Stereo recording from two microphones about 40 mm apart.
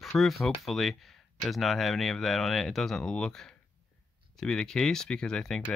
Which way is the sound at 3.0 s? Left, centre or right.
Centre.